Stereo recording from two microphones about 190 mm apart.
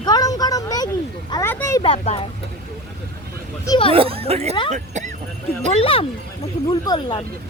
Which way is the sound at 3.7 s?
25° left (ahead or behind).